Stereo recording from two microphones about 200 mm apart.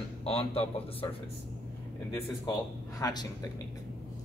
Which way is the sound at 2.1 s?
15° left (ahead or behind).